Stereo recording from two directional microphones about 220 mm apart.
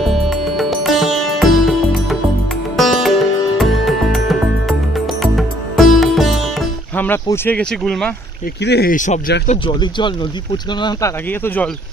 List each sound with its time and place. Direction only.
0.0 s music: centre (ahead or behind)
8.6 s speech: 45° left (ahead or behind)
9.5 s speech: 20° left (ahead or behind)